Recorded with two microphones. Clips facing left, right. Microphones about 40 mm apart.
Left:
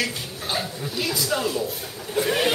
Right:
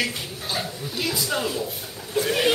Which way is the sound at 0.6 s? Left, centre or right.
Centre.